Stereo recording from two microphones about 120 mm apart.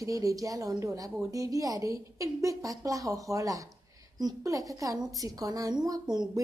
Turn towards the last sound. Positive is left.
turn(degrees=-35)  # may be behind; listen again after turning